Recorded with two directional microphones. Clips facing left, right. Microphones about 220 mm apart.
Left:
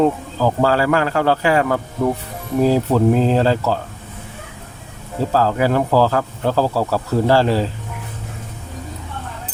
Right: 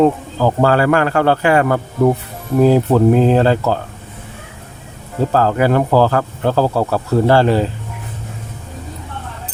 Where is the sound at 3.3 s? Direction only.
55° right (ahead or behind).